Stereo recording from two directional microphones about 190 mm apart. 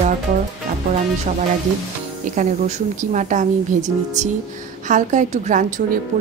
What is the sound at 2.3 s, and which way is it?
A woman's voice, 40° right (ahead or behind).